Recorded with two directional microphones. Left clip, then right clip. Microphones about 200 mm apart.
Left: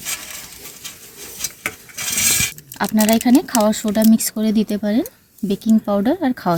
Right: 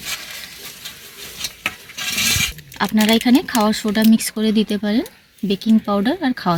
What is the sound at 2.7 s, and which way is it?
Speech, 50° left (ahead or behind).